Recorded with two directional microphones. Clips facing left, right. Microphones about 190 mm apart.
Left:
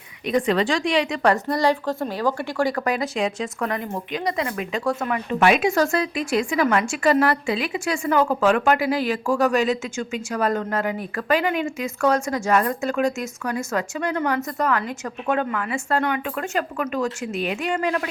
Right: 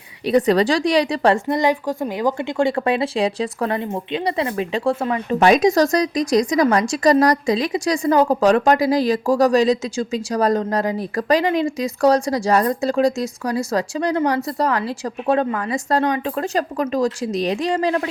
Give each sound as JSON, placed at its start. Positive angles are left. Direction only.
{"t": 0.3, "sound": "a woman's voice", "side_deg": -35}